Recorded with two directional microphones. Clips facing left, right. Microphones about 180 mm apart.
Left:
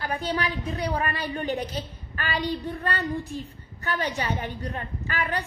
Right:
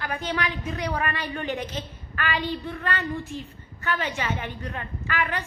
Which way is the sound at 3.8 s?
40° left (ahead or behind).